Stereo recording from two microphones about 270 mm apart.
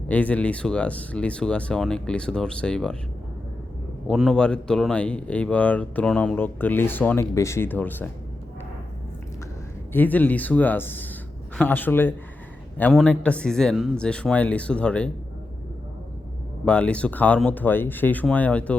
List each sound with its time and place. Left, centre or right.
0.1 s speech: centre
4.0 s speech: centre
9.9 s speech: centre
16.6 s speech: centre